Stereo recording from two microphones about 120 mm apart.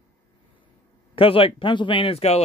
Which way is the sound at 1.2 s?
50° left (ahead or behind).